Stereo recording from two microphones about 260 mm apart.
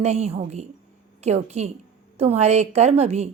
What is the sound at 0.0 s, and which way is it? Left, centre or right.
A woman's voice, right.